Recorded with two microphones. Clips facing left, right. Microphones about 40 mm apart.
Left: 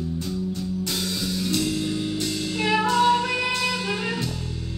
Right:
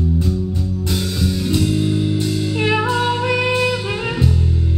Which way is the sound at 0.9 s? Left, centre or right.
Centre.